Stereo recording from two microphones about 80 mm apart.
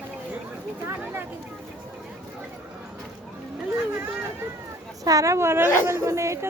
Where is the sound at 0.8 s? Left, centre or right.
Right.